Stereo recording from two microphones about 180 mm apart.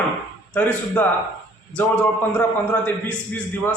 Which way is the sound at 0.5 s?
10° left (ahead or behind).